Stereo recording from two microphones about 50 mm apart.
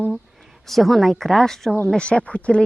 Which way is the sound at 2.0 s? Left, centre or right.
Left.